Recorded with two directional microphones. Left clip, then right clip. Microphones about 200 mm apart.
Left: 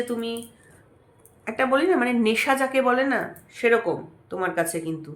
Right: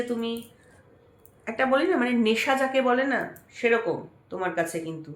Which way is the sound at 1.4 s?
25° left (ahead or behind).